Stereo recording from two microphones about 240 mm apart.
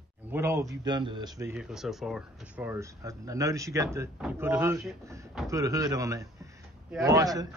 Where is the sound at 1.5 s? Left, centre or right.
Centre.